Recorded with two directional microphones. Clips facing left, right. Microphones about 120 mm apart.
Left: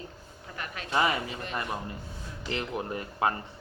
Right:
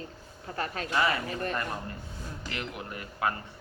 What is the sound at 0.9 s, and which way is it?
Speech, 20° left (ahead or behind).